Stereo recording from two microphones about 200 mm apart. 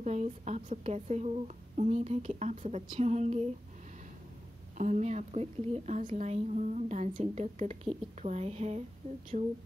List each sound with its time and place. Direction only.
0.0 s a woman's voice: 35° right (ahead or behind)
4.7 s a woman's voice: 40° right (ahead or behind)